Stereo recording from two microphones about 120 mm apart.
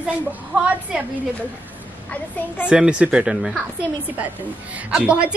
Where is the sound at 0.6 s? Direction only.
10° right (ahead or behind).